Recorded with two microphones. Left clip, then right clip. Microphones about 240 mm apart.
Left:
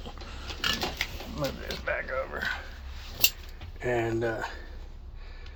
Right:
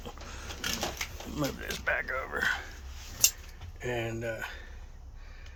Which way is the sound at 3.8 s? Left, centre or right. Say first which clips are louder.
Left 6 dB; centre.